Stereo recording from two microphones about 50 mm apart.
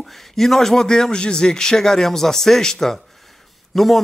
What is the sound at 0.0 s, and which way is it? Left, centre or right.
A man's voice, centre.